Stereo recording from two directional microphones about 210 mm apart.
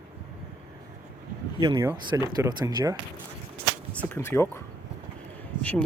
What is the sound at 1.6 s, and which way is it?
Speech, 15° right (ahead or behind).